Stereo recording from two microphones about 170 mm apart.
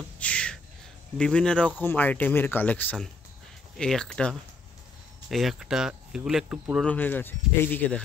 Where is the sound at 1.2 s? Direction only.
5° left (ahead or behind).